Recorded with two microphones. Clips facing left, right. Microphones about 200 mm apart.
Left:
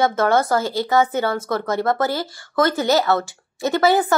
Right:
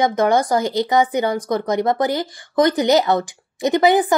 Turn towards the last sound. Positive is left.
turn(degrees=-15)  # may be behind; listen again after turning